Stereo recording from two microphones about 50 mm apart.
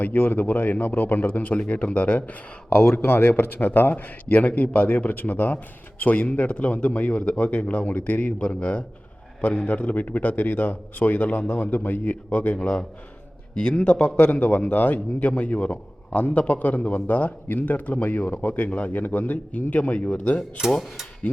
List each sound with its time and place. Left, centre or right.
0.0 s a man's voice: left
2.9 s a man's voice: left